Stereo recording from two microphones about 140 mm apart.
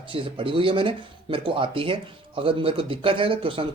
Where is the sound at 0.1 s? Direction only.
40° right (ahead or behind).